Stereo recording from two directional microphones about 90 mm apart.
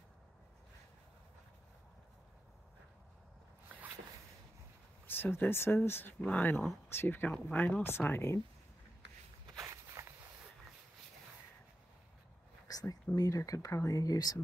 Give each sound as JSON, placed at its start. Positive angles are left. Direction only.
{"t": 5.0, "sound": "speech", "side_deg": 25}
{"t": 6.5, "sound": "speech", "side_deg": 5}
{"t": 6.9, "sound": "speech", "side_deg": 25}
{"t": 9.6, "sound": "walk", "side_deg": -35}
{"t": 12.6, "sound": "a sound", "side_deg": 40}
{"t": 13.1, "sound": "speech", "side_deg": 40}